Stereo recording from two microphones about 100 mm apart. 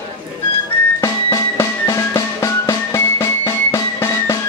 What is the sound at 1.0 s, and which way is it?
Music, 30° left (ahead or behind).